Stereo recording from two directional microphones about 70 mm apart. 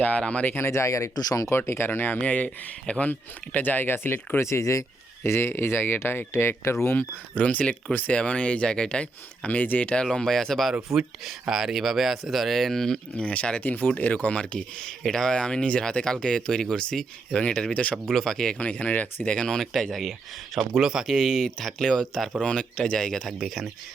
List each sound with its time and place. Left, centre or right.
0.0 s speech: centre
0.5 s speech: left
1.1 s speech: left
1.5 s speech: left
4.4 s speech: left
7.3 s speech: centre
10.9 s speech: centre
13.1 s speech: centre
18.6 s speech: left; by 23.6 s centre